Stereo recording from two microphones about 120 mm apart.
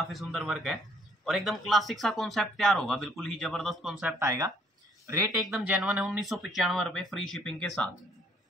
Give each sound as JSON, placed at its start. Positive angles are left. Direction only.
{"t": 0.0, "sound": "speech", "side_deg": 0}
{"t": 4.2, "sound": "speech", "side_deg": -25}
{"t": 5.4, "sound": "speech", "side_deg": -5}